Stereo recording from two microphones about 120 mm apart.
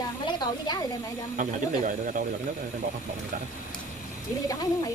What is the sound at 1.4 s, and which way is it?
Speech, 90° right.